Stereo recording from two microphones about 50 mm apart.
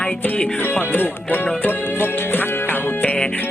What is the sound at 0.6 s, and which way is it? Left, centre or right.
Speech, left.